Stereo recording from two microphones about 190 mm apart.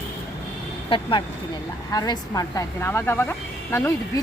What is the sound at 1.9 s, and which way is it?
Speech, 20° left (ahead or behind).